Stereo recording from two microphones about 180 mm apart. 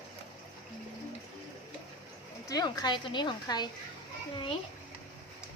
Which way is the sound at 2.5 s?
20° left (ahead or behind).